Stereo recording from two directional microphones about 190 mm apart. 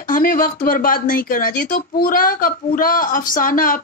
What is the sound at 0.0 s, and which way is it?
Speech, 45° left (ahead or behind).